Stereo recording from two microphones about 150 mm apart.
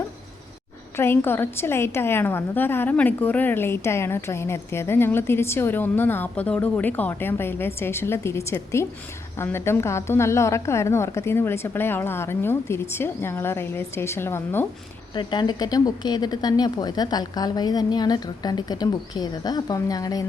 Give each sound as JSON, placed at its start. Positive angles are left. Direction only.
{"t": 0.9, "sound": "a woman's voice", "side_deg": 15}
{"t": 15.1, "sound": "a woman's voice", "side_deg": 30}